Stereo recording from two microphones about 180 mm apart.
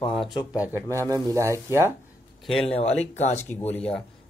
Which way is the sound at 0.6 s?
10° right (ahead or behind).